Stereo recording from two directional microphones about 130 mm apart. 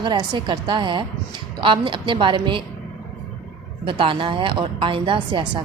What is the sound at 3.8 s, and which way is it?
Speech, 40° right (ahead or behind).